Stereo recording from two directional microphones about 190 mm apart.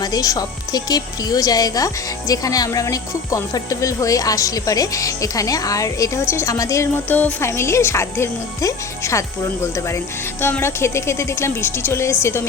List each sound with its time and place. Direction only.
0.0 s speech: 20° left (ahead or behind)